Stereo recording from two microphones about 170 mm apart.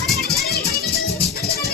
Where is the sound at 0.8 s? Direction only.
70° left (ahead or behind).